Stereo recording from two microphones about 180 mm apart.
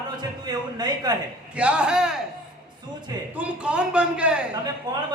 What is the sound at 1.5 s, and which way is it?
Speech, 5° right (ahead or behind).